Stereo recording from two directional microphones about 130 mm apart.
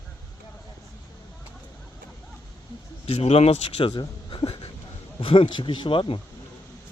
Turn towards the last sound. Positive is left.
turn(degrees=40)  # may be behind; listen again after turning